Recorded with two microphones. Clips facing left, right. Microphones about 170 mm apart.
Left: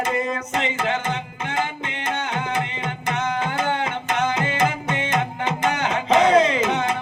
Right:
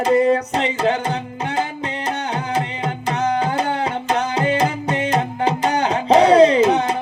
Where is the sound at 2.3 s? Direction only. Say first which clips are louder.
Right 3 dB; 35° right (ahead or behind).